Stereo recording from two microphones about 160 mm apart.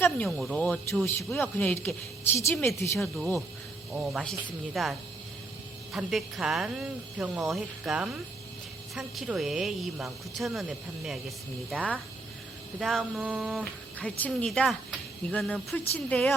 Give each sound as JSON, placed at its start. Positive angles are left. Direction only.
{"t": 0.0, "sound": "speech", "side_deg": 5}
{"t": 3.9, "sound": "speech", "side_deg": 0}